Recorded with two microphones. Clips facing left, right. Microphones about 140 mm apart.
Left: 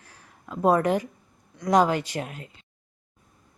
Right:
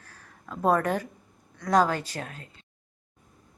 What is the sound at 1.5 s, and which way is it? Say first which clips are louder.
Speech: left 2 dB; 15° left (ahead or behind).